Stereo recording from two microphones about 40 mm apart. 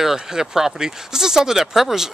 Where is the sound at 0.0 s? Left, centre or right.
Centre.